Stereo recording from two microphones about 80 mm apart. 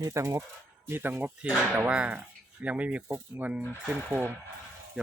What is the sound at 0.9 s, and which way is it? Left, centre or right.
Speech, right.